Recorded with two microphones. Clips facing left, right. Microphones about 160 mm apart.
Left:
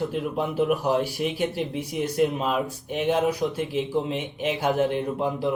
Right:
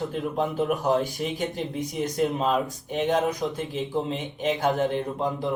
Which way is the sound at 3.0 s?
5° left (ahead or behind).